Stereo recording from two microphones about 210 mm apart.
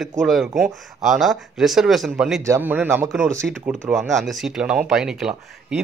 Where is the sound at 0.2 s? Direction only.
Centre (ahead or behind).